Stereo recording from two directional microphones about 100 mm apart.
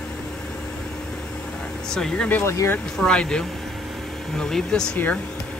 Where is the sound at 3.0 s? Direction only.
10° left (ahead or behind).